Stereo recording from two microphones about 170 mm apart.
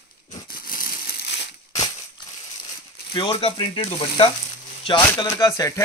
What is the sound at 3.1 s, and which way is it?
Speech, 30° left (ahead or behind).